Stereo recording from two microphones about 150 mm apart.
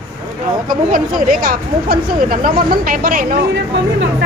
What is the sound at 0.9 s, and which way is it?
Speech, 65° right (ahead or behind).